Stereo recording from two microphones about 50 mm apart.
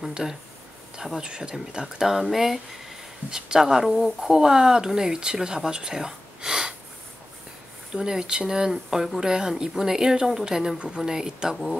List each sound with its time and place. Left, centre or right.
0.1 s speech: centre
7.9 s speech: centre